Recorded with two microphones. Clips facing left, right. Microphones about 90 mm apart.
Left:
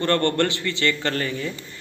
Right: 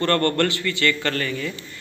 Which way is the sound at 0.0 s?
20° left (ahead or behind).